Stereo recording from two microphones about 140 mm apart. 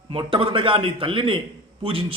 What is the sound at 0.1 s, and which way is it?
A man's voice, 40° right (ahead or behind).